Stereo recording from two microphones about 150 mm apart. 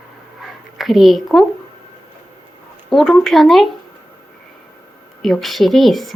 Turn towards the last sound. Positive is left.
turn(degrees=0)  # may be behind; listen again after turning